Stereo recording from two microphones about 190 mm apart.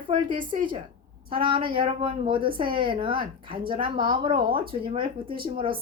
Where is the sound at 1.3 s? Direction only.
25° right (ahead or behind).